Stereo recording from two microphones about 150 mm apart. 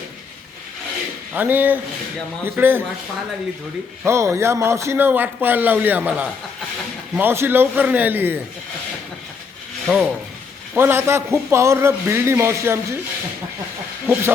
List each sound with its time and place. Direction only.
1.3 s a man's voice: 10° right (ahead or behind)
4.0 s a man's voice: 15° right (ahead or behind)
9.8 s ratchet: 5° left (ahead or behind)
10.8 s a man's voice: 15° right (ahead or behind)